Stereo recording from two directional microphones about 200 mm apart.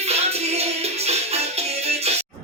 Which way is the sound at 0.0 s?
30° right (ahead or behind).